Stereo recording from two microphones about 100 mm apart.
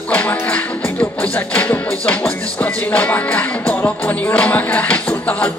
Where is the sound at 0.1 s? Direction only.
15° left (ahead or behind).